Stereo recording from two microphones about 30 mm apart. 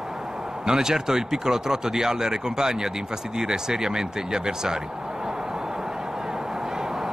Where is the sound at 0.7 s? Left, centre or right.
Centre.